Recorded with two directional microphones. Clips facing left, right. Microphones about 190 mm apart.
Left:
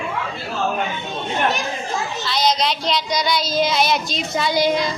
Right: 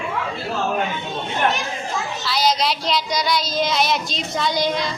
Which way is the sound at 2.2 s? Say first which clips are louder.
Even; 5° right (ahead or behind).